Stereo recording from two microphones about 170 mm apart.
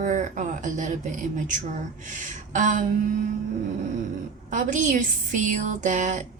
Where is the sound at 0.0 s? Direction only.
45° right (ahead or behind).